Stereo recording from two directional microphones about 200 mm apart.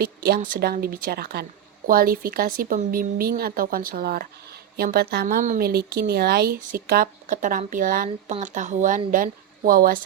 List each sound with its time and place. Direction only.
0.0 s speech: 50° right (ahead or behind)